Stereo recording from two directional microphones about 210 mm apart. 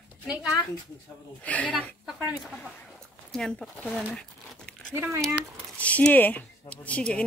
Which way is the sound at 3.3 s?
Centre (ahead or behind).